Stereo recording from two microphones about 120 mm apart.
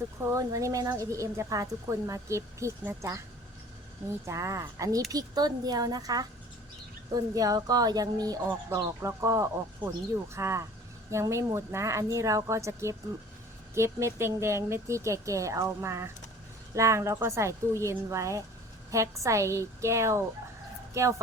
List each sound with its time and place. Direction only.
0.3 s a woman's voice: 25° right (ahead or behind)
4.3 s a woman's voice: 25° right (ahead or behind)
8.4 s a woman's voice: 20° right (ahead or behind)